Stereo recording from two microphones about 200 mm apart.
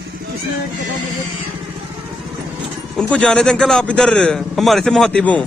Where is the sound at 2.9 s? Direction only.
5° left (ahead or behind).